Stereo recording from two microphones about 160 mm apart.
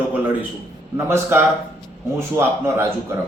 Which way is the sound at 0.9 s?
15° right (ahead or behind).